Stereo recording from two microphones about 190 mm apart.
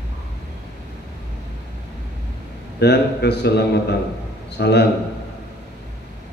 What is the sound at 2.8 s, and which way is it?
A man's voice, 60° left (ahead or behind).